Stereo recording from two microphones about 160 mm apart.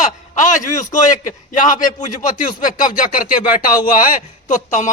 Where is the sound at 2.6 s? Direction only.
55° left (ahead or behind).